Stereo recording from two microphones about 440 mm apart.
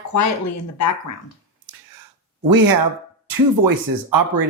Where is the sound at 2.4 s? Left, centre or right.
Right.